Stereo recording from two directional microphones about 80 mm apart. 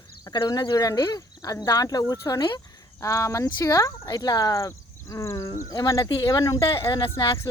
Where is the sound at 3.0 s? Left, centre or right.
Left.